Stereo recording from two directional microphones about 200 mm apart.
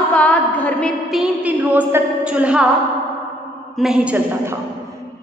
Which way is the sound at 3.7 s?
5° right (ahead or behind).